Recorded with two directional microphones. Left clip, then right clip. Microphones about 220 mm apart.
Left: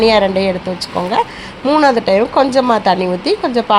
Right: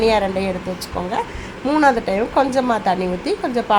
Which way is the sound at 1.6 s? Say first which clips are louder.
Left 5 dB; 20° left (ahead or behind).